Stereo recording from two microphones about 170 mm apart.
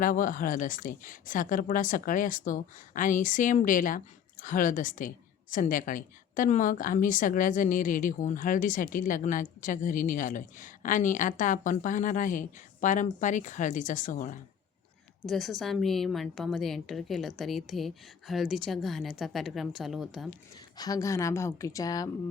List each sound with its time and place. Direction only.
0.0 s a woman's voice: 50° left (ahead or behind)
15.3 s a woman's voice: centre (ahead or behind)
20.7 s a woman's voice: 20° left (ahead or behind)